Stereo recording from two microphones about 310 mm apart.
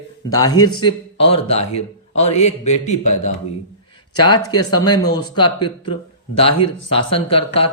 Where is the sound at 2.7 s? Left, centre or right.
Left.